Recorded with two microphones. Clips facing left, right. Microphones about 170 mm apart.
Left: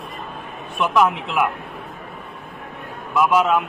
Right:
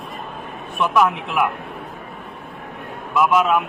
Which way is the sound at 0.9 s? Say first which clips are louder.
Even; 15° left (ahead or behind).